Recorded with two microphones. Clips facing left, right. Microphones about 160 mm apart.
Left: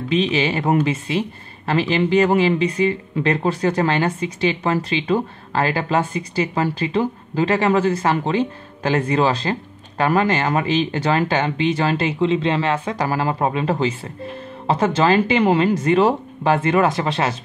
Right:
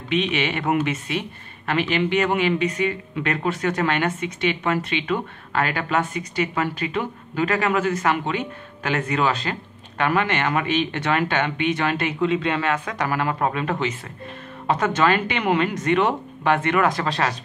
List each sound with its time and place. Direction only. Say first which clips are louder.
0.1 s speech: left 3 dB; 30° left (ahead or behind)